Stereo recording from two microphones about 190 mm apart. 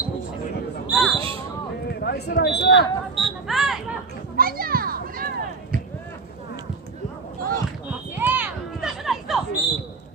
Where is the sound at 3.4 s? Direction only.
Centre (ahead or behind).